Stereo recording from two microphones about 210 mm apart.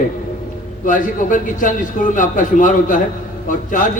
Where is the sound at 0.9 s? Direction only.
40° left (ahead or behind).